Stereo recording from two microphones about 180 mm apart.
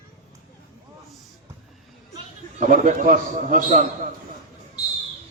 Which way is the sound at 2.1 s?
45° right (ahead or behind).